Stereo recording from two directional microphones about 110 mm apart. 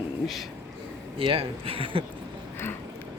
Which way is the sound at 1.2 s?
55° right (ahead or behind).